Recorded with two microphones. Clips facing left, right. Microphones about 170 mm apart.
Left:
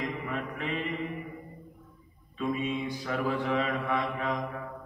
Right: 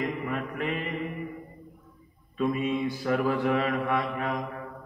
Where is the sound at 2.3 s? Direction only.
40° right (ahead or behind).